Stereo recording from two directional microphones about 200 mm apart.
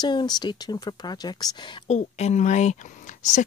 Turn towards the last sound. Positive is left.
turn(degrees=35)  # may be behind; listen again after turning